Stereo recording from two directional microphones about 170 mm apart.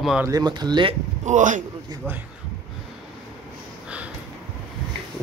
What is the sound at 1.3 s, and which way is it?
Speech, 50° right (ahead or behind).